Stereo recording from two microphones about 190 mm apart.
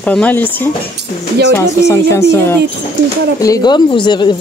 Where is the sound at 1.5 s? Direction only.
15° left (ahead or behind).